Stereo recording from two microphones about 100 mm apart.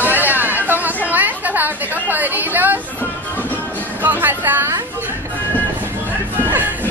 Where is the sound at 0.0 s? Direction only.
20° right (ahead or behind).